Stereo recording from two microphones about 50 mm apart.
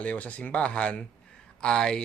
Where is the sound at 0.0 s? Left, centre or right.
Left.